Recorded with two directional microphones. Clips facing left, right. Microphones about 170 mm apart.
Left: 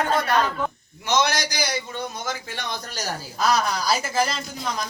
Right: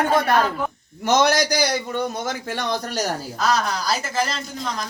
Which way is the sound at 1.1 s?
40° right (ahead or behind).